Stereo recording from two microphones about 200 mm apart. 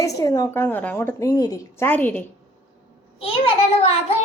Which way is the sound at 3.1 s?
30° left (ahead or behind).